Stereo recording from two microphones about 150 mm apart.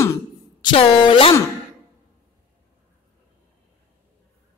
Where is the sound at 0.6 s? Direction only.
40° left (ahead or behind).